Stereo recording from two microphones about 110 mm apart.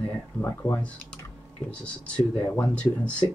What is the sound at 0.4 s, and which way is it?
Speech, 25° left (ahead or behind).